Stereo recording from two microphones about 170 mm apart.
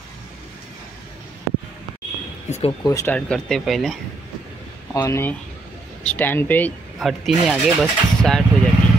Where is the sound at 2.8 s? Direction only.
20° left (ahead or behind).